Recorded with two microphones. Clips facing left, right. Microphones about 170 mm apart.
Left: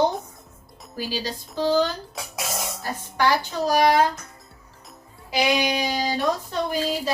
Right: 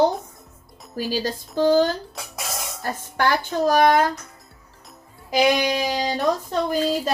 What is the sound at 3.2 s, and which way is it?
Speech, 50° right (ahead or behind).